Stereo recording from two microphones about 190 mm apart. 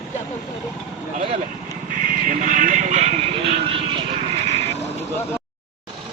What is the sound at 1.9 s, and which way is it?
Vehicle, 45° right (ahead or behind).